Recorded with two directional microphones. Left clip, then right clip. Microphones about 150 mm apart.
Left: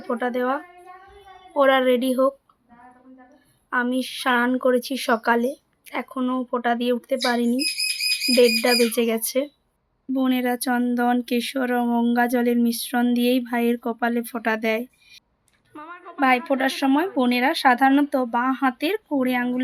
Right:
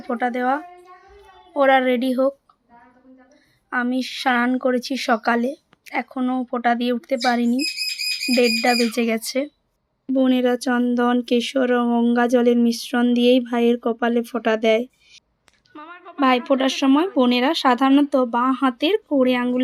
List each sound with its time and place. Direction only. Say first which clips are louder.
0.1 s speech: right 2 dB; 20° right (ahead or behind)
3.7 s speech: even; 15° right (ahead or behind)
15.7 s a sound: even; centre (ahead or behind)
16.2 s speech: right 2 dB; 20° right (ahead or behind)